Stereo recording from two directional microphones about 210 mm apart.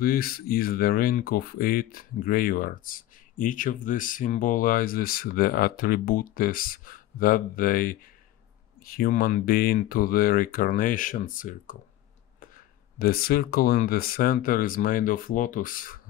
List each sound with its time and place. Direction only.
0.0 s speech: 45° left (ahead or behind)
13.0 s speech: 45° left (ahead or behind)